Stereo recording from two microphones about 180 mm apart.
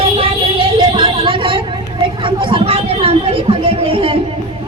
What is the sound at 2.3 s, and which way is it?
Chatter, 30° right (ahead or behind).